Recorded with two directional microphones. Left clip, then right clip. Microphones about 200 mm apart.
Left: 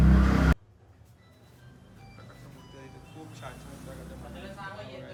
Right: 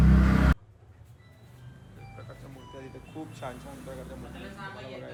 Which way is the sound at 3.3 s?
5° left (ahead or behind).